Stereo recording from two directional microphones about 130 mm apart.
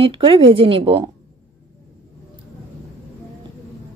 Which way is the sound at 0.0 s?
45° right (ahead or behind).